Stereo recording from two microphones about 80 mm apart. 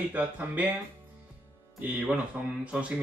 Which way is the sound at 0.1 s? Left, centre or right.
Right.